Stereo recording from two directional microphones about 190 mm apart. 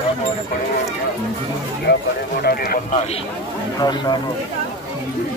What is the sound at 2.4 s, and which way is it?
Speech, 50° left (ahead or behind).